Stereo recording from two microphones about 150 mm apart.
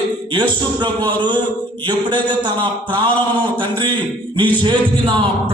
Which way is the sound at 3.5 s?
35° right (ahead or behind).